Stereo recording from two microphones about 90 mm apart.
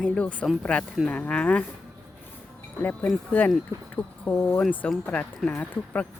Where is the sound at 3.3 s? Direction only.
20° left (ahead or behind).